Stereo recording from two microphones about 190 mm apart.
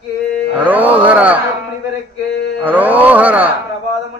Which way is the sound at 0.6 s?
10° right (ahead or behind).